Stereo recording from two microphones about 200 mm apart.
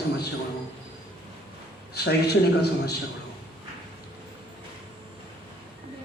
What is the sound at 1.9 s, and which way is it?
A man's voice, 55° left (ahead or behind).